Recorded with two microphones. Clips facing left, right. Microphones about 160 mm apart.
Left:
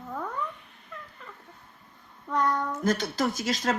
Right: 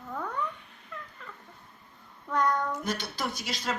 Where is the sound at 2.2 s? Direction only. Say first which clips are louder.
Left 1 dB; centre (ahead or behind).